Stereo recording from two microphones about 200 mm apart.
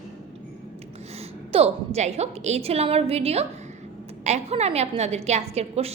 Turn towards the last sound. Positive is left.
turn(degrees=-30)  # may be behind; listen again after turning